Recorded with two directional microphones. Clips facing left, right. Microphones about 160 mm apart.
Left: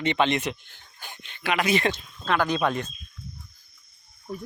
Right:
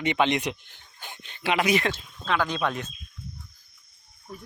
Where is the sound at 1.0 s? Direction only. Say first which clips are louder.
Right 1 dB; 20° right (ahead or behind).